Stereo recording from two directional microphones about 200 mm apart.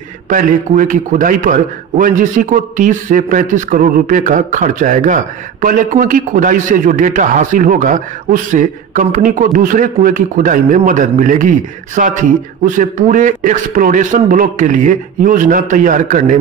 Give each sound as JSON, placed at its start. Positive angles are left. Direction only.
{"t": 0.3, "sound": "a man's voice", "side_deg": -40}